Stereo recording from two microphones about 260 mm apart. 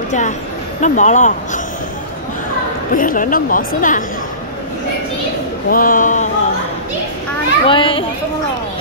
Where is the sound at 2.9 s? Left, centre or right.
Left.